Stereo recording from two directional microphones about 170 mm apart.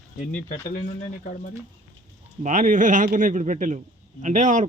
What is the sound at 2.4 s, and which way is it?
Speech, 50° right (ahead or behind).